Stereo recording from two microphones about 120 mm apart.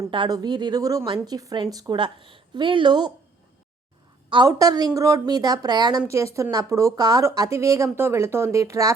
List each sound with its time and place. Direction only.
0.1 s speech: 35° right (ahead or behind)
4.4 s a woman's voice: 30° right (ahead or behind)